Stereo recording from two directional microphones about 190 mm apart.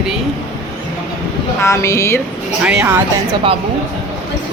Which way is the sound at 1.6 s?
15° left (ahead or behind).